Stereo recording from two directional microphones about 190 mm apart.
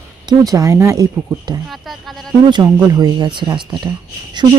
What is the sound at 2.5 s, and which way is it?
Speech, 20° right (ahead or behind).